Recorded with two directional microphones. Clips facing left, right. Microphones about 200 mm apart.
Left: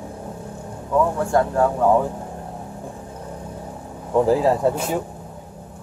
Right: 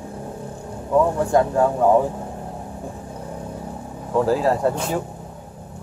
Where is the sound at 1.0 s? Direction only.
15° right (ahead or behind).